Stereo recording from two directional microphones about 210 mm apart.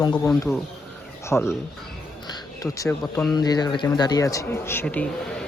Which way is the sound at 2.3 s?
15° left (ahead or behind).